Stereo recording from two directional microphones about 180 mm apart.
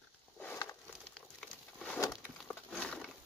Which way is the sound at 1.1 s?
5° left (ahead or behind).